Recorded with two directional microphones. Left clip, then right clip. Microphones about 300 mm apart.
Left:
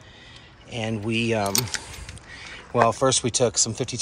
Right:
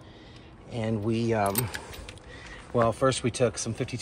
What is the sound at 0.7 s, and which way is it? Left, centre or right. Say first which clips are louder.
Speech: left 2 dB; centre.